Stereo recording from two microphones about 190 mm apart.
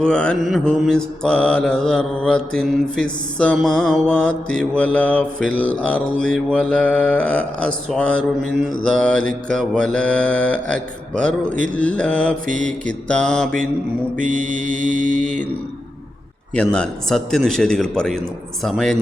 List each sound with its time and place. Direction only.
0.0 s mantra: 5° left (ahead or behind)
11.4 s speech: 45° right (ahead or behind)
11.7 s mantra: 5° left (ahead or behind)
14.2 s mantra: 40° right (ahead or behind)
16.6 s mantra: 5° left (ahead or behind)